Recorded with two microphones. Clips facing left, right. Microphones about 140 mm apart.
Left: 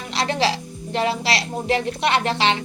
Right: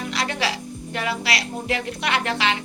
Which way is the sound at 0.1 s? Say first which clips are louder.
Left 6 dB; 30° left (ahead or behind).